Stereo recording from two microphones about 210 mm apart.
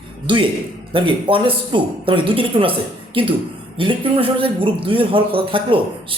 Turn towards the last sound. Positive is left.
turn(degrees=-25)  # may be behind; listen again after turning